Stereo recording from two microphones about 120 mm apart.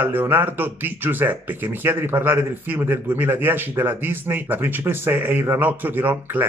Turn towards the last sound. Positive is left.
turn(degrees=-15)  # may be behind; listen again after turning